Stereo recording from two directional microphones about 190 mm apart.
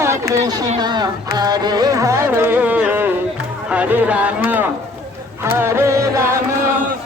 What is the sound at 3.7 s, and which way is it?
Speech, 5° right (ahead or behind).